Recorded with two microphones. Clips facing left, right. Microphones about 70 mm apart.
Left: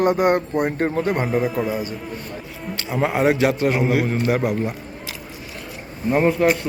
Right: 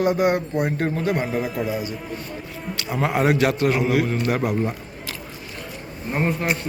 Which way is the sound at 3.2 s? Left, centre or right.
Centre.